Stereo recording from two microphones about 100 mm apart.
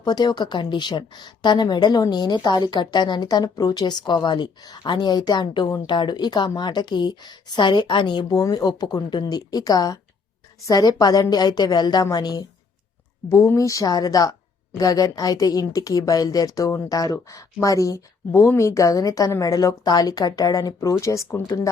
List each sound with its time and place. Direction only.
0.0 s a woman's voice: 45° left (ahead or behind)
8.4 s a woman's voice: 40° left (ahead or behind)
13.2 s a woman's voice: 25° left (ahead or behind)